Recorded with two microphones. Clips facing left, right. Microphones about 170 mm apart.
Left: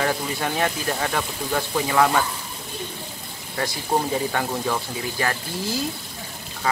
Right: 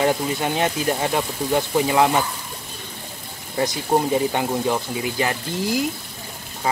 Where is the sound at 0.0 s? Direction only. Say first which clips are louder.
Right 4 dB; 20° right (ahead or behind).